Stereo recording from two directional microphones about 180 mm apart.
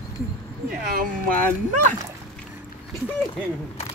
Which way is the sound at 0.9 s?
50° right (ahead or behind).